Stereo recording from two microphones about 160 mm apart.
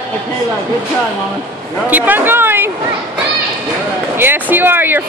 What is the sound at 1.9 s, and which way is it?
Speech, 10° right (ahead or behind).